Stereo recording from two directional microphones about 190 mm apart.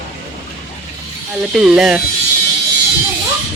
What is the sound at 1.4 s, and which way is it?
Speech, 5° right (ahead or behind).